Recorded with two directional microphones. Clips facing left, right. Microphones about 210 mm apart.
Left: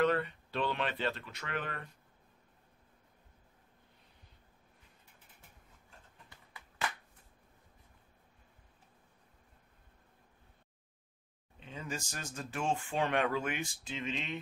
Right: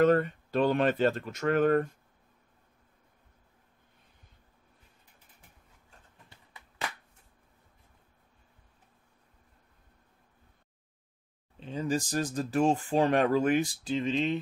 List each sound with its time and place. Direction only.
0.0 s speech: 45° right (ahead or behind)
11.6 s speech: 35° right (ahead or behind)